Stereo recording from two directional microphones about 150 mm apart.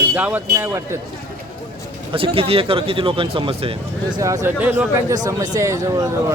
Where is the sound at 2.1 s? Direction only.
40° right (ahead or behind).